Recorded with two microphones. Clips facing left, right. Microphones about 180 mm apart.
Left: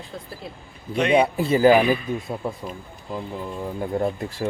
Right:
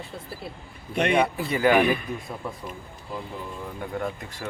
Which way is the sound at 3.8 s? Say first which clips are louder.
Left 7 dB; 30° left (ahead or behind).